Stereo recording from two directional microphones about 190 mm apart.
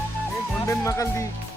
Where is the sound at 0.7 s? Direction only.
15° left (ahead or behind).